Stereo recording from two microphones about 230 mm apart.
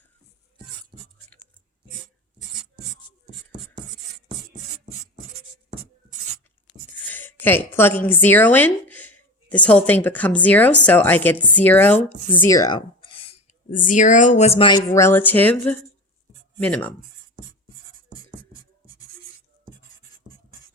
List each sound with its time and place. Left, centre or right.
7.0 s speech: centre; by 13.3 s left
13.7 s speech: left; by 16.9 s centre